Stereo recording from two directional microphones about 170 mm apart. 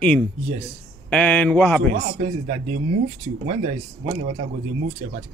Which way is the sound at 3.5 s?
40° right (ahead or behind).